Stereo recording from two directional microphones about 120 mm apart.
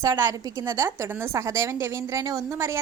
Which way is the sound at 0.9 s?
20° right (ahead or behind).